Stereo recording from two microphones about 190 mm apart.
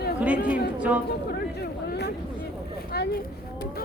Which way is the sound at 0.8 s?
5° right (ahead or behind).